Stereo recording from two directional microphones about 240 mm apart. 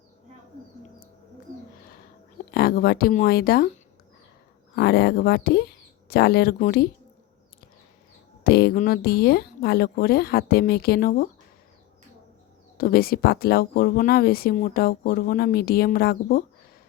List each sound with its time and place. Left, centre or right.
2.5 s speech: left
4.7 s speech: left
8.4 s speech: left
12.7 s speech: left